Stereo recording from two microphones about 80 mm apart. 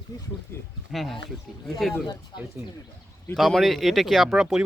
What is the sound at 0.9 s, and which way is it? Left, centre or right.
Speech, centre.